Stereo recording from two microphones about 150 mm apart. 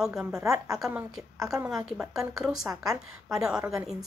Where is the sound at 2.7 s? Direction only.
25° right (ahead or behind).